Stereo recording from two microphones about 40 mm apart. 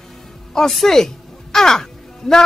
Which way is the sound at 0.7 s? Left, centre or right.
Centre.